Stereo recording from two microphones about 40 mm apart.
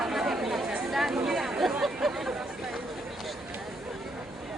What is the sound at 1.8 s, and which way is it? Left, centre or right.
Hubbub, centre.